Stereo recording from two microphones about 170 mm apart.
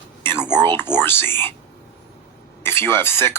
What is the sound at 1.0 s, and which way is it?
Speech, 15° left (ahead or behind).